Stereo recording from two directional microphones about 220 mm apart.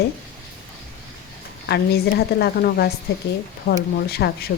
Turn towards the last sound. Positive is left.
turn(degrees=45)  # may be behind; listen again after turning